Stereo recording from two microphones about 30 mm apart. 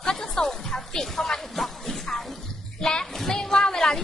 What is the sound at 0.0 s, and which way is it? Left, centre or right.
Music, left.